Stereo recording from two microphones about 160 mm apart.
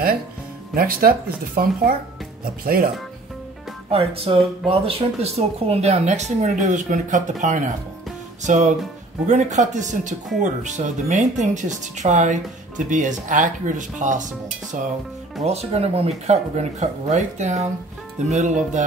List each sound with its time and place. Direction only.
0.7 s speech: 65° right (ahead or behind)
3.9 s speech: 40° right (ahead or behind)
15.4 s speech: 40° right (ahead or behind)